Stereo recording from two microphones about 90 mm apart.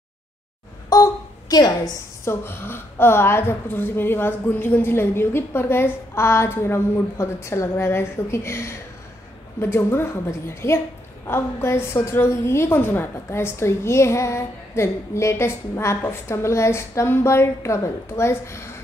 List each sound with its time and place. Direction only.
1.5 s a woman's voice: 45° left (ahead or behind)
2.2 s a woman's voice: 25° left (ahead or behind)